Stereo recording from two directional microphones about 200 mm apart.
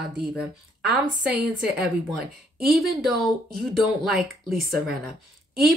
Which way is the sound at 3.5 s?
Centre (ahead or behind).